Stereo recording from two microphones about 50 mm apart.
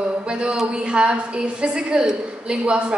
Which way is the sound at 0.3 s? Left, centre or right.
Centre.